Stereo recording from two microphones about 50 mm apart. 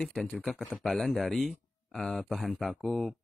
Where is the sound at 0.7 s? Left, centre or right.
Centre.